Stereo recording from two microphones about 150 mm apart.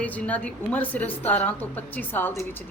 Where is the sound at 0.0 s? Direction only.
10° left (ahead or behind).